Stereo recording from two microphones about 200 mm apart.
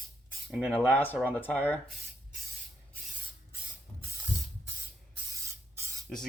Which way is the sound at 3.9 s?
15° left (ahead or behind).